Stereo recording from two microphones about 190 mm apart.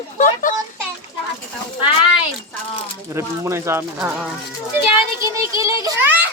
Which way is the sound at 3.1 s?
15° right (ahead or behind).